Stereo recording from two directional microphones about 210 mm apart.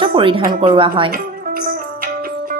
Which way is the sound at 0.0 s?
25° right (ahead or behind).